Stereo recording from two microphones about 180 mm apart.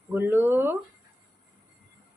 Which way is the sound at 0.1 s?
10° right (ahead or behind).